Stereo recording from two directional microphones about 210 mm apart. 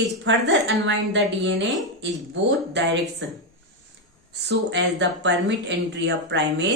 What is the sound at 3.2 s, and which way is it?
Speech, 60° right (ahead or behind).